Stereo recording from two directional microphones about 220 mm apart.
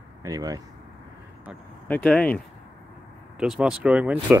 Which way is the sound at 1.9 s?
5° left (ahead or behind).